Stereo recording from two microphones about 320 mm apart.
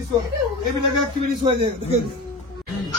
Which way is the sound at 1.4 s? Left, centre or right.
Centre.